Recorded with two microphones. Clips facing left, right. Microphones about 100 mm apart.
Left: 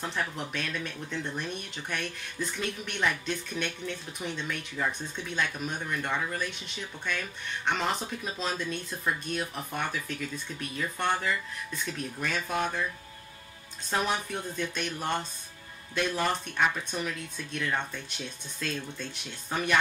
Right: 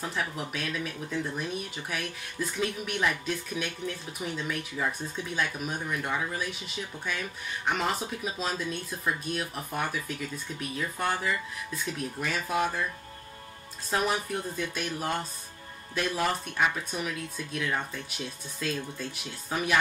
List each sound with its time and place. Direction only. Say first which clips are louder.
0.0 s speech: even; 5° right (ahead or behind)
13.8 s speech: right 1 dB; 5° right (ahead or behind)